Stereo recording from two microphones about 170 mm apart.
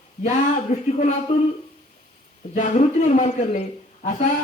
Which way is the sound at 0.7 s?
40° left (ahead or behind).